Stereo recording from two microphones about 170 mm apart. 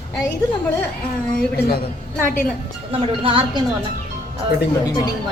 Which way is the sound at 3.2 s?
30° right (ahead or behind).